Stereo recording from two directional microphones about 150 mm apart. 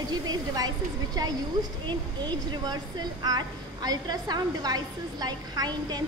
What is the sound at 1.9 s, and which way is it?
A woman's voice, 30° right (ahead or behind).